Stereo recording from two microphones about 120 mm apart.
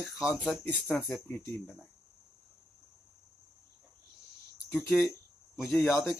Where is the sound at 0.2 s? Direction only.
5° right (ahead or behind).